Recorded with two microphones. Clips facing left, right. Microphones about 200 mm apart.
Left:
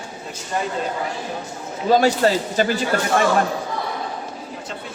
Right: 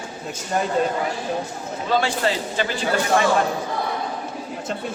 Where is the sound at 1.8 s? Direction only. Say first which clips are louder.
Left 6 dB; 40° left (ahead or behind).